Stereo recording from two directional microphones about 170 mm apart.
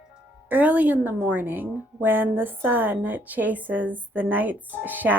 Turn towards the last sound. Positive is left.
turn(degrees=-10)  # may be behind; listen again after turning